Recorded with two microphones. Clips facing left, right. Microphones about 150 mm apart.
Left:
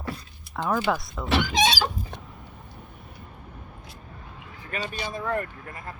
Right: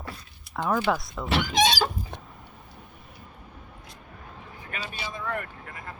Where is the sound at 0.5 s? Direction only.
Centre (ahead or behind).